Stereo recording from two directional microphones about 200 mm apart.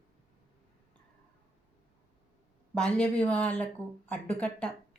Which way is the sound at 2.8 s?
5° left (ahead or behind).